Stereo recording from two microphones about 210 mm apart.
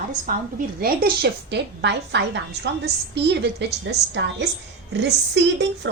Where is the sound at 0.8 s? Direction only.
45° right (ahead or behind).